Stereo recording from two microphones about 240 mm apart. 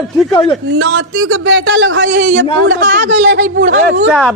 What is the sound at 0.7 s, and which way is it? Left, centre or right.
A man's voice, right.